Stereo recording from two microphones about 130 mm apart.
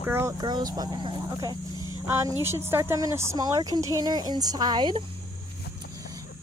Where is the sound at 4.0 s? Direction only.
30° right (ahead or behind).